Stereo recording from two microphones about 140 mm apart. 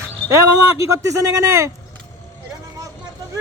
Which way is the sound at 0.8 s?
20° right (ahead or behind).